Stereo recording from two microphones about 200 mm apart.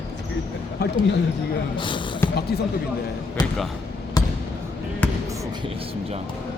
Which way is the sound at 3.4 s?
20° left (ahead or behind).